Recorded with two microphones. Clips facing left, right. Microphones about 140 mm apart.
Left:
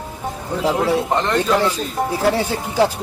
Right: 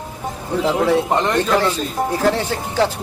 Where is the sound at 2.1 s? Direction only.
10° left (ahead or behind).